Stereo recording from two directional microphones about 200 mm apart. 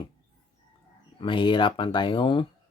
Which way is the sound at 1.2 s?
25° left (ahead or behind).